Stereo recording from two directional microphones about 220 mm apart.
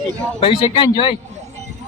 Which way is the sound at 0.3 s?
25° left (ahead or behind).